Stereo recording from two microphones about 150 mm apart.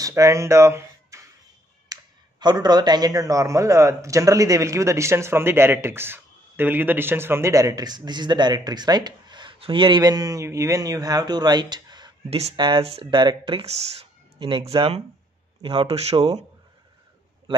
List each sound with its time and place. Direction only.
0.0 s speech: 20° right (ahead or behind)
1.9 s a sound: 25° right (ahead or behind)
2.4 s a man's voice: 30° right (ahead or behind)
12.3 s speech: 45° right (ahead or behind)
17.5 s a man's voice: 30° right (ahead or behind)